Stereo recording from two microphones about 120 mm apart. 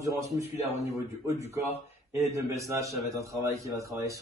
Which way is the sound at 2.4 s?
25° right (ahead or behind).